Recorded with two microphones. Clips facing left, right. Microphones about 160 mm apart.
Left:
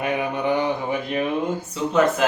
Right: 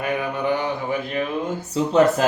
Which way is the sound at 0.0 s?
20° left (ahead or behind).